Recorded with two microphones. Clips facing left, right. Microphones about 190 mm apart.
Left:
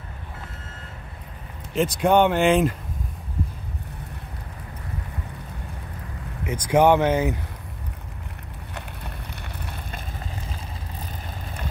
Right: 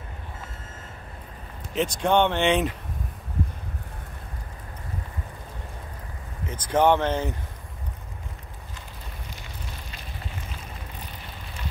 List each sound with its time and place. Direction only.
1.8 s speech: 5° left (ahead or behind)
6.4 s speech: 10° left (ahead or behind)
8.7 s fire: 65° left (ahead or behind)